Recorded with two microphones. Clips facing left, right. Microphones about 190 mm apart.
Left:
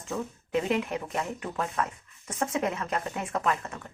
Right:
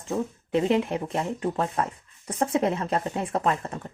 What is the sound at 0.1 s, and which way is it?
Speech, 30° right (ahead or behind).